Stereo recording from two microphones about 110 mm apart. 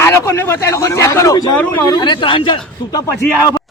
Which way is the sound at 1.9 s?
45° left (ahead or behind).